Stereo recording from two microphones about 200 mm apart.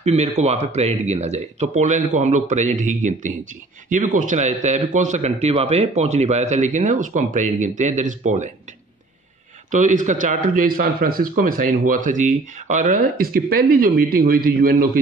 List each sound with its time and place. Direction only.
0.0 s speech: 35° right (ahead or behind)
9.7 s speech: 40° right (ahead or behind)